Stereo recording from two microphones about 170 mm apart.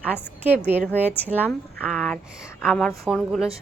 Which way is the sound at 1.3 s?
10° right (ahead or behind).